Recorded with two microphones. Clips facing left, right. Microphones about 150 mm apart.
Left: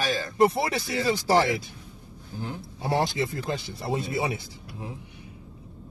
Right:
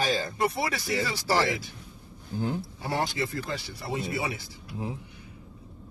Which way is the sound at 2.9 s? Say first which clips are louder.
Left 3 dB; 25° left (ahead or behind).